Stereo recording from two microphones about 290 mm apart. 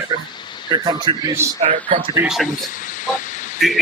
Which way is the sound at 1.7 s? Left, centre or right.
Right.